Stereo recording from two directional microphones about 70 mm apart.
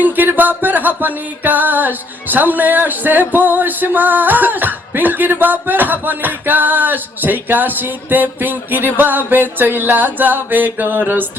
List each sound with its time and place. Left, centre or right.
0.0 s music: right